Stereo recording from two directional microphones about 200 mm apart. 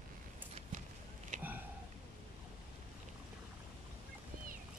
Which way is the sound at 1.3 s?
40° right (ahead or behind).